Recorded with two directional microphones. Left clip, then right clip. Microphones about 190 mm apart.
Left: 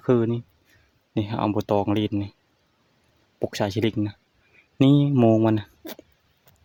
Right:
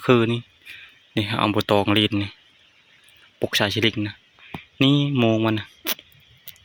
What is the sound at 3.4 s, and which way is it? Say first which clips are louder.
Speech: right 4 dB; 10° left (ahead or behind).